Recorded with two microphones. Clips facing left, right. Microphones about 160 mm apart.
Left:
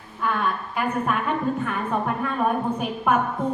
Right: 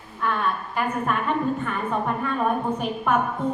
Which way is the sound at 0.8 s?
Centre (ahead or behind).